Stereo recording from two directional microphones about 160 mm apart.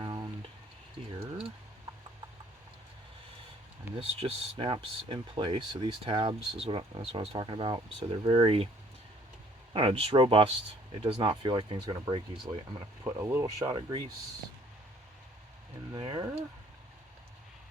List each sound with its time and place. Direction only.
0.0 s a sound: 25° right (ahead or behind)
3.9 s speech: 40° right (ahead or behind)
9.7 s speech: 35° right (ahead or behind)
13.1 s speech: 15° right (ahead or behind)
15.9 s speech: 30° right (ahead or behind)